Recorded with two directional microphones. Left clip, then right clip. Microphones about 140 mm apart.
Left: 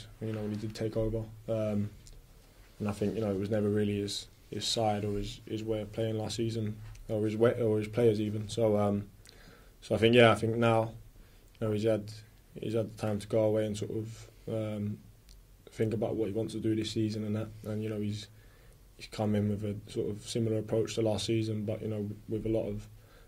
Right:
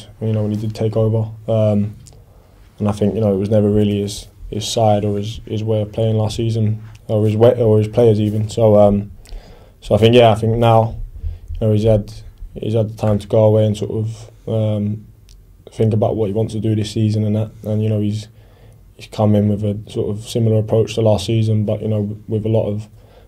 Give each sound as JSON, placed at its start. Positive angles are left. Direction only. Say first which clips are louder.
{"t": 0.0, "sound": "speech", "louder": "right 15 dB", "side_deg": -35}